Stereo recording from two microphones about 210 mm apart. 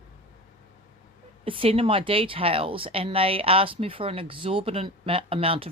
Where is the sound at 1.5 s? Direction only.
25° right (ahead or behind).